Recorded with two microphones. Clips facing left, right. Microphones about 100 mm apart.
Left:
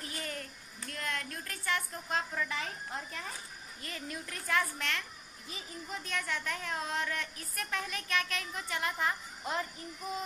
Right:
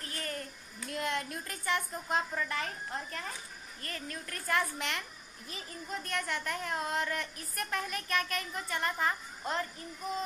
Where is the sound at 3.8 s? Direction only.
10° left (ahead or behind).